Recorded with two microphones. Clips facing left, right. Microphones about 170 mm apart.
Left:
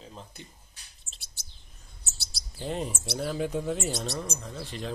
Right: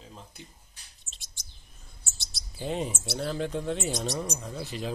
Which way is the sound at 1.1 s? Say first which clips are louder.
Left 1 dB; 15° left (ahead or behind).